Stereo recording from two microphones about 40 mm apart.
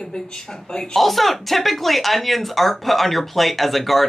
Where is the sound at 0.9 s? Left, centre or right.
Centre.